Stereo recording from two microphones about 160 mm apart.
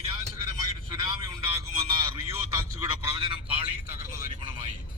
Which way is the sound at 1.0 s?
25° right (ahead or behind).